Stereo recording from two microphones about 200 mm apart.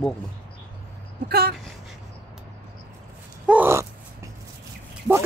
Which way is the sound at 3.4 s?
10° right (ahead or behind).